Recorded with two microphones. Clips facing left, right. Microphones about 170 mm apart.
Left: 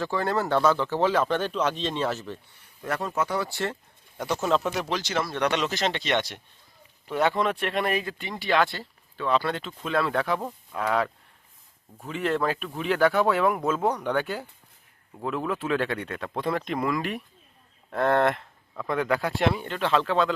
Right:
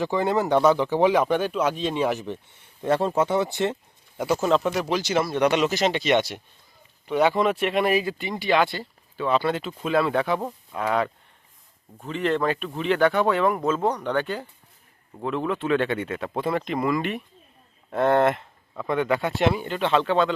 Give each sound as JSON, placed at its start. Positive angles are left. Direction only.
{"t": 0.0, "sound": "speech", "side_deg": -20}
{"t": 2.8, "sound": "speech", "side_deg": -30}
{"t": 4.2, "sound": "speech", "side_deg": -5}